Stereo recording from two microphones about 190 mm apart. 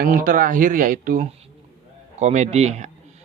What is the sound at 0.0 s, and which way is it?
Speech, 45° right (ahead or behind).